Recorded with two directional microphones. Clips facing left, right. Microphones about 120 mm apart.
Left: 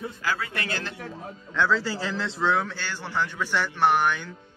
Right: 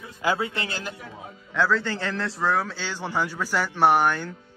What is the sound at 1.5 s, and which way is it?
A man's voice, centre (ahead or behind).